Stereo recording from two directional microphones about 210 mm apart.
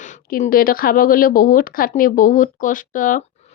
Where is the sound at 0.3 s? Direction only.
40° left (ahead or behind).